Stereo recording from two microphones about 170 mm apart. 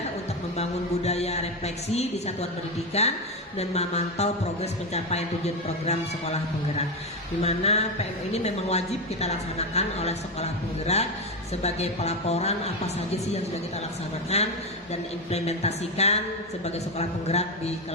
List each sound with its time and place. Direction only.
0.5 s a woman's voice: 40° left (ahead or behind)
14.3 s a woman's voice: 40° left (ahead or behind)